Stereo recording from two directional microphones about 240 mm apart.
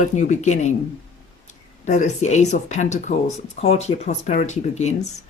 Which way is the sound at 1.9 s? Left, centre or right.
Left.